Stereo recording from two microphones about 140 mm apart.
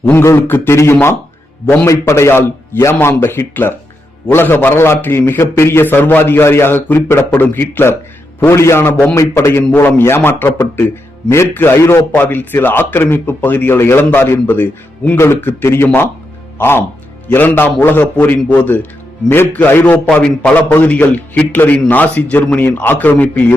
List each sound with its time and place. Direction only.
0.0 s a man's voice: 15° left (ahead or behind)